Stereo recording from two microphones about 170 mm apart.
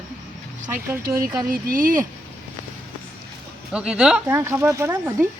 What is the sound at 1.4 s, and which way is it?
Speech, 55° right (ahead or behind).